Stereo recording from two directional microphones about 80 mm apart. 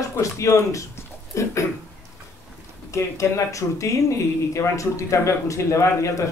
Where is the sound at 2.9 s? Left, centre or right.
Left.